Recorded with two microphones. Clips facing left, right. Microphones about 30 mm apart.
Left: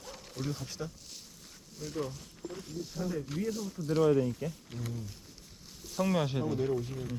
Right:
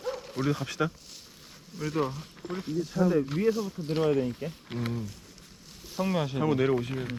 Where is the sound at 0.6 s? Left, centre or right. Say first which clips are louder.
Right 11 dB; right.